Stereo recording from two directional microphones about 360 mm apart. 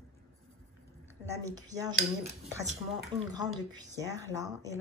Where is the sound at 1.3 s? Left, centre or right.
Centre.